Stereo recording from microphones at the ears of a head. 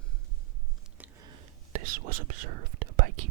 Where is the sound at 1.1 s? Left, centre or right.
Right.